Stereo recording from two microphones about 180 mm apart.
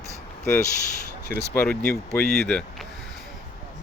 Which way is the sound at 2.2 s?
65° left (ahead or behind).